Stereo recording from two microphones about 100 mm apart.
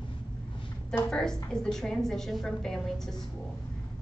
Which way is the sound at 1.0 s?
5° left (ahead or behind).